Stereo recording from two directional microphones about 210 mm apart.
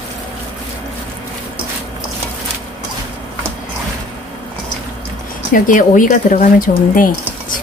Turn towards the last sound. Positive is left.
turn(degrees=40)  # may be behind; listen again after turning